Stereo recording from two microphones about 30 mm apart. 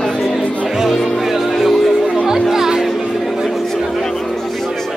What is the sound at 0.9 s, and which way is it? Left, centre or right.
Speech, centre.